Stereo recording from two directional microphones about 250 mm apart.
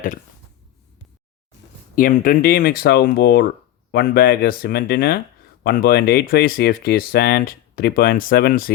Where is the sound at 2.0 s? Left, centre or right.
Left.